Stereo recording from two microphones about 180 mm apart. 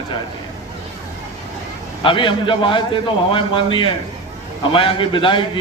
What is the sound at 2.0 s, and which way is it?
A man's voice, 30° left (ahead or behind).